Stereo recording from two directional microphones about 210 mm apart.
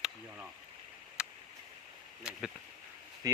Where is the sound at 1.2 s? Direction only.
5° right (ahead or behind).